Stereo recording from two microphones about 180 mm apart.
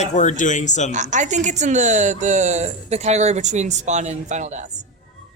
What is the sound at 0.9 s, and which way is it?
Speech, 40° right (ahead or behind).